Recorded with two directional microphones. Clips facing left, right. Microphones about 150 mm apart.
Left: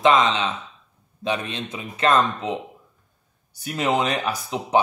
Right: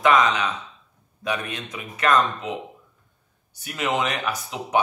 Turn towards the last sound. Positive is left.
turn(degrees=35)  # may be behind; listen again after turning